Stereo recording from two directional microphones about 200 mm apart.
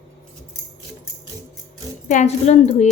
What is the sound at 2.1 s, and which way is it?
Speech, 35° left (ahead or behind).